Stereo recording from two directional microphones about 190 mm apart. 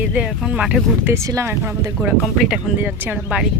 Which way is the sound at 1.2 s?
15° right (ahead or behind).